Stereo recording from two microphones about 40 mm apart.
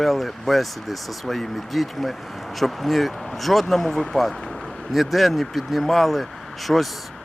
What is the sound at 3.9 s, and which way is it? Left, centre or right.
Speech, centre.